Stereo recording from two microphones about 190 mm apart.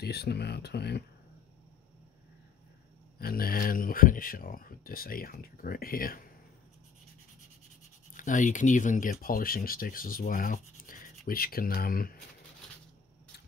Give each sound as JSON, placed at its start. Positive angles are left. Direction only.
{"t": 0.0, "sound": "speech", "side_deg": 55}
{"t": 3.2, "sound": "speech", "side_deg": 50}
{"t": 8.1, "sound": "speech", "side_deg": 40}